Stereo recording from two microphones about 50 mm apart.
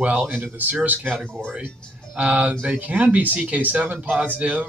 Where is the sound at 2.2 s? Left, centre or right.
Right.